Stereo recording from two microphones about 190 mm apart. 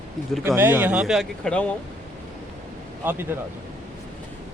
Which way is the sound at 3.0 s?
10° right (ahead or behind).